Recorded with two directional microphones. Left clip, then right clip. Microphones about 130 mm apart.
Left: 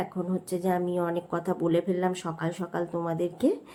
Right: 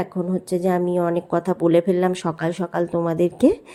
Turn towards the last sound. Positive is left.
turn(degrees=-55)  # may be behind; listen again after turning